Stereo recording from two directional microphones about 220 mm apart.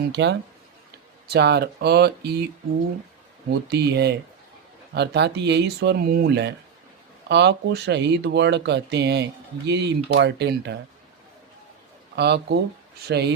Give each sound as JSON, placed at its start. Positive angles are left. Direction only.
{"t": 0.1, "sound": "speech", "side_deg": -50}
{"t": 3.7, "sound": "speech", "side_deg": -50}
{"t": 12.1, "sound": "speech", "side_deg": -50}